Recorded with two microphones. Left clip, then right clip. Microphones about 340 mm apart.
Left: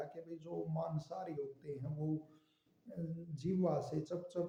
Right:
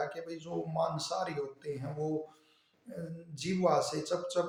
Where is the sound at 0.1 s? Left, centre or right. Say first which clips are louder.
Right 7 dB; left.